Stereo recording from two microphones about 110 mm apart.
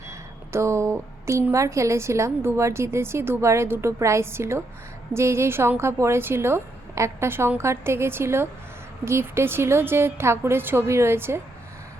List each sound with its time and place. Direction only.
0.1 s a woman's voice: 25° right (ahead or behind)